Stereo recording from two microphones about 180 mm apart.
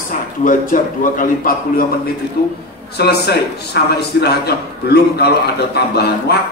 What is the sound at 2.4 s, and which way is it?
A man's voice, 55° left (ahead or behind).